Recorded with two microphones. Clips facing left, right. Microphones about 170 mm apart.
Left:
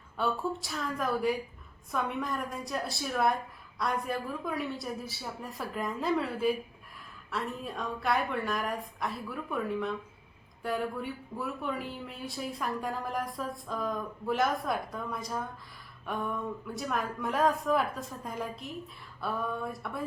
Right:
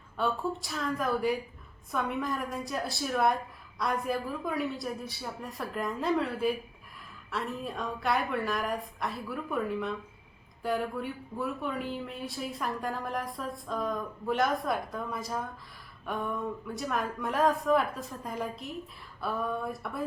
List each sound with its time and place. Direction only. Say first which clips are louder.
0.2 s speech: right 1 dB; centre (ahead or behind)